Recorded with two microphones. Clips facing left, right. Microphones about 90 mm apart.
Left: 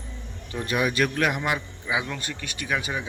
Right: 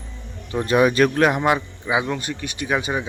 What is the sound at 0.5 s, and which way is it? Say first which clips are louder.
Speech: right 9 dB; 30° right (ahead or behind).